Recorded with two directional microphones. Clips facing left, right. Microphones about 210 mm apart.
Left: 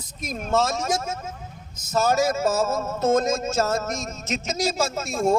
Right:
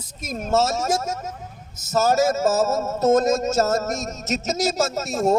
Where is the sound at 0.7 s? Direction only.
40° right (ahead or behind).